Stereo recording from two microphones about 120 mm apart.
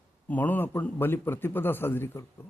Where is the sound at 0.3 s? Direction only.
15° left (ahead or behind).